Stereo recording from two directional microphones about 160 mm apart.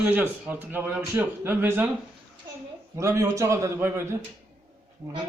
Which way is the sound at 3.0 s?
20° right (ahead or behind).